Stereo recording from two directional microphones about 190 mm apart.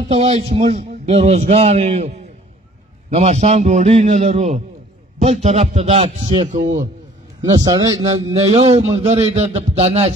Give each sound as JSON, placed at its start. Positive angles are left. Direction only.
{"t": 0.1, "sound": "a man's voice", "side_deg": -30}
{"t": 8.4, "sound": "speech", "side_deg": -35}